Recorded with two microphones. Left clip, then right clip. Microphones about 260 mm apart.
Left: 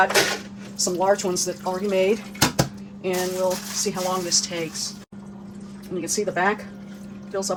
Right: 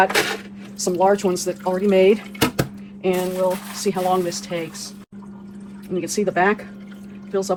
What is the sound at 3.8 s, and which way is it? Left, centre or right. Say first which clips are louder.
Speech: right 6 dB; right.